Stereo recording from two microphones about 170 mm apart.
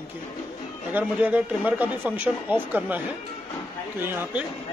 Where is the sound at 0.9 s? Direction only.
10° right (ahead or behind).